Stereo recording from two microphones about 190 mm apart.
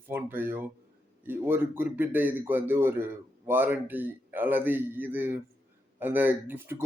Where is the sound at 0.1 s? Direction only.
10° right (ahead or behind).